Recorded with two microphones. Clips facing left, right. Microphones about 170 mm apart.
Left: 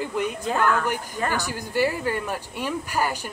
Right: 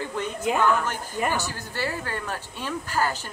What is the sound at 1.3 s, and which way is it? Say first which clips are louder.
A woman's voice: left 5 dB; 15° left (ahead or behind).